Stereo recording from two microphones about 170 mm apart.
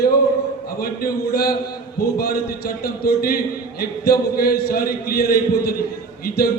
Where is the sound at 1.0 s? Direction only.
65° left (ahead or behind).